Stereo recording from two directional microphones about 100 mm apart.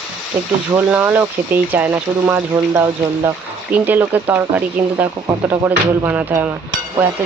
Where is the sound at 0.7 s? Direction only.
20° right (ahead or behind).